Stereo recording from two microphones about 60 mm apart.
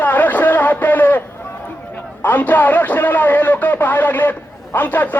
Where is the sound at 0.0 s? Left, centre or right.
Left.